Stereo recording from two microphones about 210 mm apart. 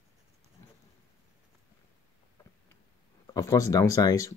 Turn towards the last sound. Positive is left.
turn(degrees=15)  # may be behind; listen again after turning